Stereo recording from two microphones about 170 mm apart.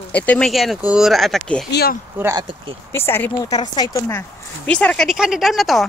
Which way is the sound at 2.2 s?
20° right (ahead or behind).